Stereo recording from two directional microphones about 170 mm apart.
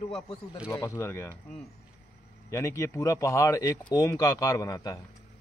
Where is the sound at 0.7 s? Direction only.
20° left (ahead or behind).